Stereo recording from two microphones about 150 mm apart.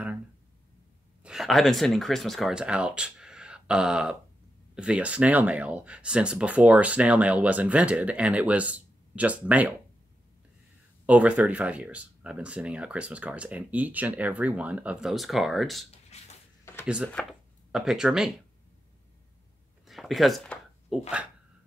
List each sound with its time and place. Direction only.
1.2 s speech: 5° right (ahead or behind)
11.1 s speech: 10° right (ahead or behind)
16.1 s a sound: 45° left (ahead or behind)
16.8 s speech: 5° right (ahead or behind)
17.1 s speech: 5° left (ahead or behind)
19.9 s a sound: centre (ahead or behind)